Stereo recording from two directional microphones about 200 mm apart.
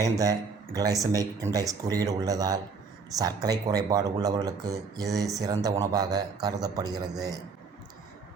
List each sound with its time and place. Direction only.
0.0 s speech: 15° right (ahead or behind)